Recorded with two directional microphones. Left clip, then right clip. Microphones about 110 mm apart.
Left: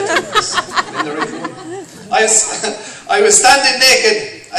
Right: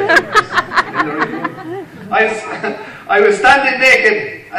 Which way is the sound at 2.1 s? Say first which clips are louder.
Left 1 dB; 40° left (ahead or behind).